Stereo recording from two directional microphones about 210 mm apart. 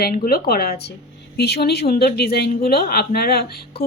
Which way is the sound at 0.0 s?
45° left (ahead or behind).